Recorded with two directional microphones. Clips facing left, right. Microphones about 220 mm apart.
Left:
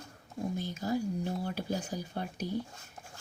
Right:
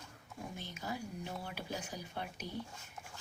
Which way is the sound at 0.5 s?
40° left (ahead or behind).